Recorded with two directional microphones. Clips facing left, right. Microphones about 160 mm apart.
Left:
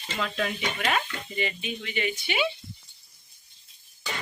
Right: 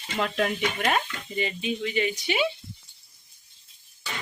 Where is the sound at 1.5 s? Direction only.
35° right (ahead or behind).